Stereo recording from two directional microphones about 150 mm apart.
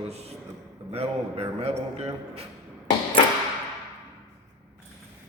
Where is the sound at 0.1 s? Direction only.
45° right (ahead or behind).